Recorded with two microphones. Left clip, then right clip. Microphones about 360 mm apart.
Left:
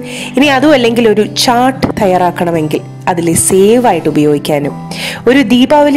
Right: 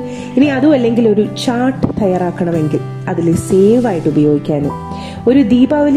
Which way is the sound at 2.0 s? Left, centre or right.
Left.